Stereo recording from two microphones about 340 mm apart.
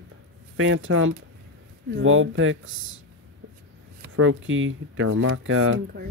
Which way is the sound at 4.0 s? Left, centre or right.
Right.